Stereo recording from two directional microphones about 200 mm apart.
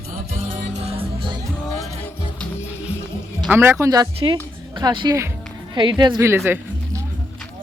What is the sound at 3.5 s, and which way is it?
A woman's voice, 10° right (ahead or behind).